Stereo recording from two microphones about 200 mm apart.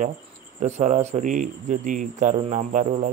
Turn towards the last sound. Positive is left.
turn(degrees=-40)  # may be behind; listen again after turning